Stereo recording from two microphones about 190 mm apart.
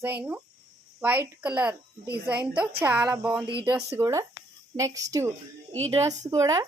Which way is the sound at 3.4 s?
25° right (ahead or behind).